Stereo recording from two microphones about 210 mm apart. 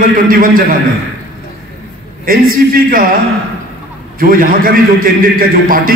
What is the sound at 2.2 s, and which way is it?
Speech, 45° right (ahead or behind).